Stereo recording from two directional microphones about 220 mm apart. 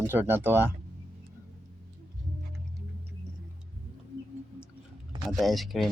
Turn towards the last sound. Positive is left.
turn(degrees=0)  # may be behind; listen again after turning